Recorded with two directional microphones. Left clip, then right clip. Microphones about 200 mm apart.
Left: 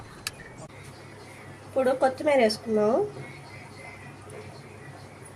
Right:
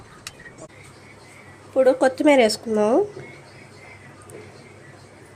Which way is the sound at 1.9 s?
55° right (ahead or behind).